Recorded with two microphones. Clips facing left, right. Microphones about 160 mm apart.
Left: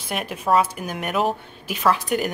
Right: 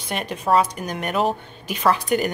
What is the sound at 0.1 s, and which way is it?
A woman's voice, 5° left (ahead or behind).